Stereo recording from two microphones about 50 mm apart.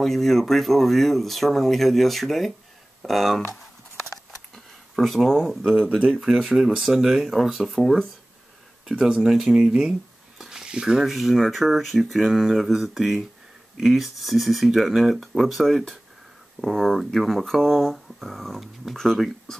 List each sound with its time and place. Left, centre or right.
0.0 s speech: centre
4.9 s speech: centre
8.9 s speech: centre
9.2 s speech: centre
9.6 s speech: centre
10.4 s a sound: centre
11.1 s speech: centre